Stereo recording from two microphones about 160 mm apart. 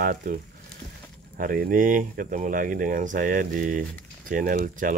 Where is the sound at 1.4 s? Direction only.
60° right (ahead or behind).